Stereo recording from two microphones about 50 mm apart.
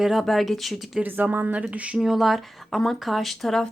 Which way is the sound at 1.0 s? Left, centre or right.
Right.